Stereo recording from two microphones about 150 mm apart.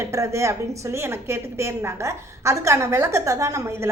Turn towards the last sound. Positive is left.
turn(degrees=-20)  # may be behind; listen again after turning